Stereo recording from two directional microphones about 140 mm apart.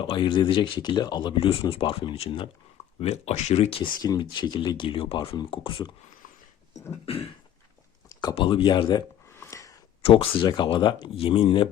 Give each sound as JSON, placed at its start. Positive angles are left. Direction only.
{"t": 0.0, "sound": "speech", "side_deg": 35}
{"t": 4.0, "sound": "speech", "side_deg": 30}
{"t": 7.0, "sound": "speech", "side_deg": 40}
{"t": 8.1, "sound": "a sound", "side_deg": 30}
{"t": 8.4, "sound": "speech", "side_deg": 35}
{"t": 9.3, "sound": "a sound", "side_deg": 20}
{"t": 10.0, "sound": "speech", "side_deg": 40}